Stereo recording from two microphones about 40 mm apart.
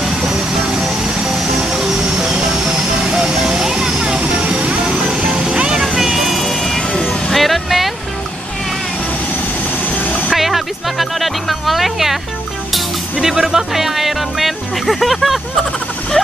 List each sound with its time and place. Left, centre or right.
0.2 s vehicle: centre
5.0 s music: centre
5.9 s vehicle: centre
6.4 s vehicle: centre
6.9 s vehicle: left
7.3 s music: centre
10.3 s music: centre
13.2 s music: centre